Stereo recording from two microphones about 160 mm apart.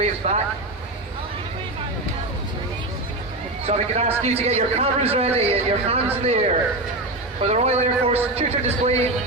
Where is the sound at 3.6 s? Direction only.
40° right (ahead or behind).